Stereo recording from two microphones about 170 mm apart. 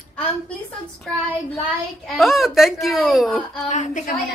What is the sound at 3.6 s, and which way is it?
Speech, 45° left (ahead or behind).